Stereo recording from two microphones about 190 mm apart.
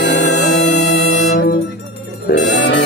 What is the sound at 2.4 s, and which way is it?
Music, 65° left (ahead or behind).